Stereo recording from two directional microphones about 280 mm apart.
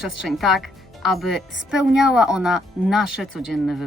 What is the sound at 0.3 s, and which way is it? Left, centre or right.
A woman's voice, centre.